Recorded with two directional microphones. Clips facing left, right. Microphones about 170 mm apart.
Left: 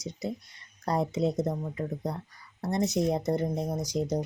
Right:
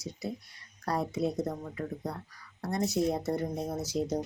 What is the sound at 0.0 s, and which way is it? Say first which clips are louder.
Speech: left 3 dB; 20° left (ahead or behind).